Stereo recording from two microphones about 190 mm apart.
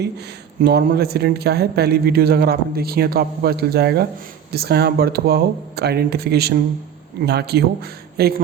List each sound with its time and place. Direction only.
0.6 s speech: 55° right (ahead or behind)